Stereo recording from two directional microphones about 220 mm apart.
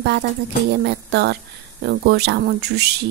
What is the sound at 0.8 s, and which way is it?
Speech, 50° right (ahead or behind).